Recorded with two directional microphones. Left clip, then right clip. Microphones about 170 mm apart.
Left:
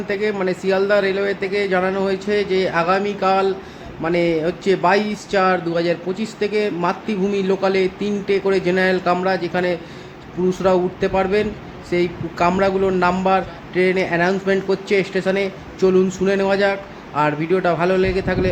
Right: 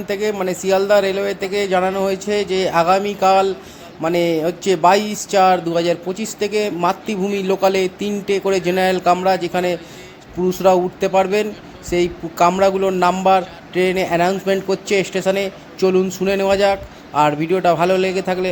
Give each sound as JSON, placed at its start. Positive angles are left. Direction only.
{"t": 0.1, "sound": "speech", "side_deg": -20}